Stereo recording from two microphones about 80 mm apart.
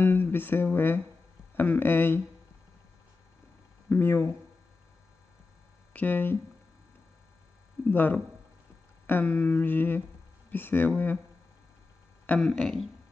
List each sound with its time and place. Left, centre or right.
0.0 s speech: left
1.6 s humming: left
3.9 s humming: left
5.9 s humming: left
7.9 s humming: left
12.4 s speech: centre